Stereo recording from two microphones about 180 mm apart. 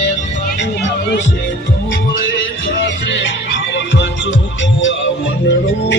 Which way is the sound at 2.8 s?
90° left.